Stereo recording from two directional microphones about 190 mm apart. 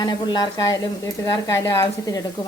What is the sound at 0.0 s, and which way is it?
Speech, 20° left (ahead or behind).